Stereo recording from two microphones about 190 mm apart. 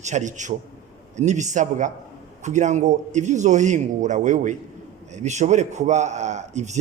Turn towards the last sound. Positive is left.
turn(degrees=-40)  # may be behind; listen again after turning